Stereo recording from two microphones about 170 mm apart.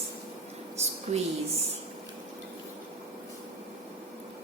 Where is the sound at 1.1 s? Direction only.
45° right (ahead or behind).